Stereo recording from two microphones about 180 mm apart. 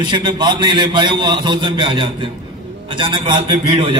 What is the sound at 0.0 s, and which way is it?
A man's voice, 25° right (ahead or behind).